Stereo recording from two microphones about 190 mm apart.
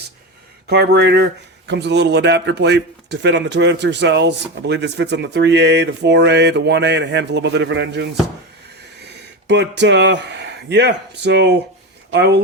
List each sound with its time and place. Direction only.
0.7 s speech: 60° right (ahead or behind)
9.5 s speech: 65° right (ahead or behind)